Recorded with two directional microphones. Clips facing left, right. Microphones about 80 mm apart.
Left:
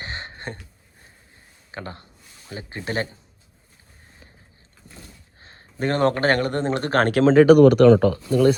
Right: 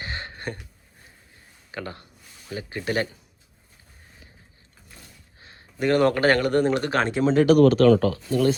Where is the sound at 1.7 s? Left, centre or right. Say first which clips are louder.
Even; left.